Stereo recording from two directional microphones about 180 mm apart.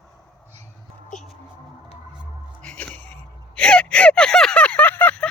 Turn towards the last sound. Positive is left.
turn(degrees=10)  # may be behind; listen again after turning